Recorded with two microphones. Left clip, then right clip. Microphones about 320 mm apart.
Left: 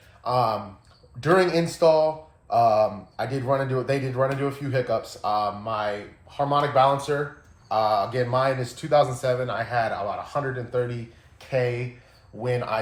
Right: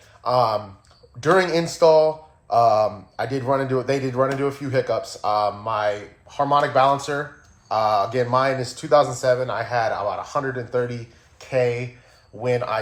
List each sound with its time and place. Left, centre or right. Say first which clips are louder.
0.2 s a man's voice: right 4 dB; right
11.3 s a sound: right 4 dB; right
12.4 s a man's voice: right 4 dB; right